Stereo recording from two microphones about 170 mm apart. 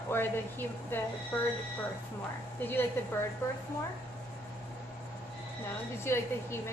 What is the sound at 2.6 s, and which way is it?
Speech, 10° left (ahead or behind).